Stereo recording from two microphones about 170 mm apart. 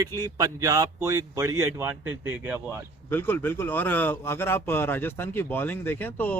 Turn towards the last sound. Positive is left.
turn(degrees=10)  # may be behind; listen again after turning